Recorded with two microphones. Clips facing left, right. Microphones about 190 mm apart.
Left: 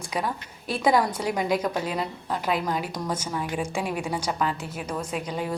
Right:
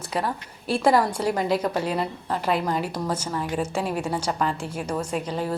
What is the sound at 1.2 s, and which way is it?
Speech, 10° left (ahead or behind).